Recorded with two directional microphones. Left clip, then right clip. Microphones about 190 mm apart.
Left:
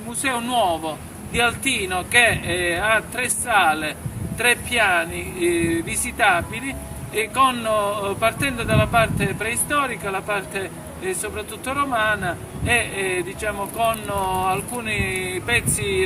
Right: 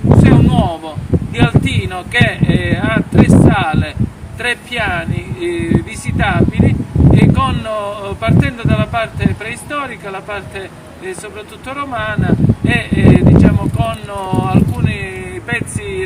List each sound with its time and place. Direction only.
0.2 s a sound: 10° right (ahead or behind)
1.4 s speech: 10° right (ahead or behind)
11.7 s speech: 5° right (ahead or behind)